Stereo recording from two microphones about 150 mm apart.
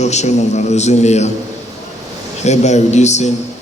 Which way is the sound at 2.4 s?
50° left (ahead or behind).